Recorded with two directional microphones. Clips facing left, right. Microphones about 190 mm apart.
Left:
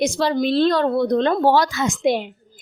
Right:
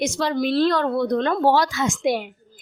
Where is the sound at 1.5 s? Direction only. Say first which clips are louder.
Left 2 dB; 45° left (ahead or behind).